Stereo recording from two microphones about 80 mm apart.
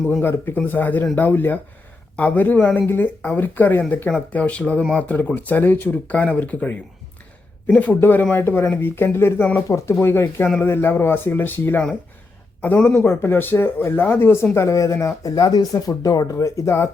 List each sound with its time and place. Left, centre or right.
0.2 s speech: left
7.8 s speech: left
9.6 s speech: left
13.1 s speech: left
14.5 s speech: left